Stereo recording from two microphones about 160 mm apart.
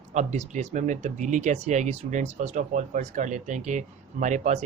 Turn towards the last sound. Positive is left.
turn(degrees=-45)  # may be behind; listen again after turning